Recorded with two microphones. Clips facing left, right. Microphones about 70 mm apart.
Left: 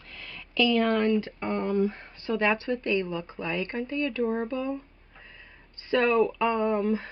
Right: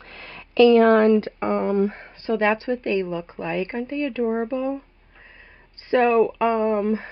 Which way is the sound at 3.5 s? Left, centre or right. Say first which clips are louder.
Right 5 dB; right.